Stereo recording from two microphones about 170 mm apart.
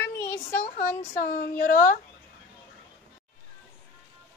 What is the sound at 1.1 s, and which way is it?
Speech, 55° left (ahead or behind).